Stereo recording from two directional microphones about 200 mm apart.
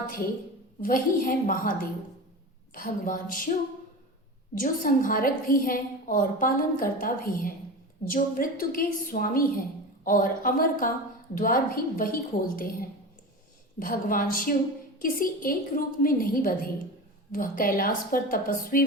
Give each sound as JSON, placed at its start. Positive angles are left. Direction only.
{"t": 0.8, "sound": "a woman's voice", "side_deg": 45}
{"t": 2.7, "sound": "a woman's voice", "side_deg": 45}
{"t": 4.6, "sound": "a woman's voice", "side_deg": 45}
{"t": 13.7, "sound": "a woman's voice", "side_deg": 45}